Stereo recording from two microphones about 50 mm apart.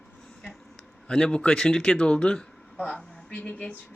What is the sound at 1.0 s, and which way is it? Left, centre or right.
Speech, left.